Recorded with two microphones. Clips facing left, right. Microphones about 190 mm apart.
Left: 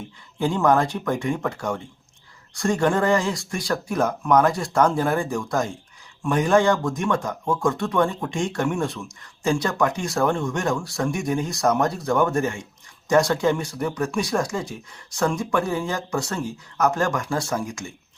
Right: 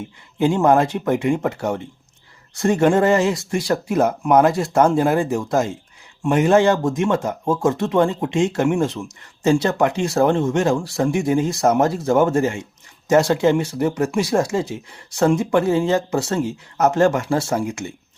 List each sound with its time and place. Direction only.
0.3 s speech: 20° right (ahead or behind)